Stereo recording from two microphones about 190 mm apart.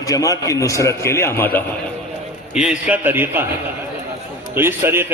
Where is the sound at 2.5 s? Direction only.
5° right (ahead or behind).